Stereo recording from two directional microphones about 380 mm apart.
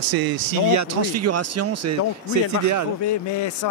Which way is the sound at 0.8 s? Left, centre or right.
Right.